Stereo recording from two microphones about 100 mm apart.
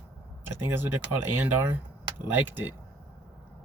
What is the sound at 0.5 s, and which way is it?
Speech, 20° right (ahead or behind).